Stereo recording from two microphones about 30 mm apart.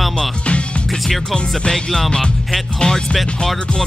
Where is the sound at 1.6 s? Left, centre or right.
Left.